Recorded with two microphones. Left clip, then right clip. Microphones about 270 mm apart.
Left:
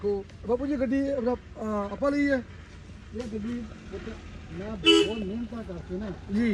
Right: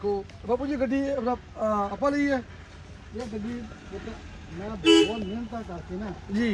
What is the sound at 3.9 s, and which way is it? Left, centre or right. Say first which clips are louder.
Speech: even; right.